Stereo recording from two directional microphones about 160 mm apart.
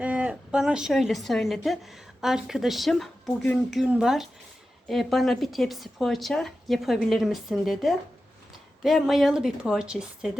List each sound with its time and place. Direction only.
0.0 s a woman's voice: 10° right (ahead or behind)